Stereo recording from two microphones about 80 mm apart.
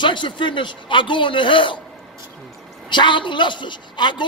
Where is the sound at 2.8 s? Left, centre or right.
Left.